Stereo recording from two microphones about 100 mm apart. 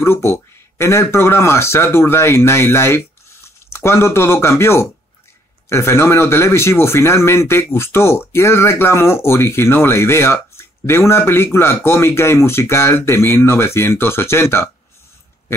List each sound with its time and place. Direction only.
0.0 s speech: 25° left (ahead or behind)